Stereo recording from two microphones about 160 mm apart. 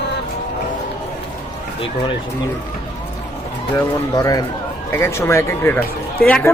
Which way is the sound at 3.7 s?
20° left (ahead or behind).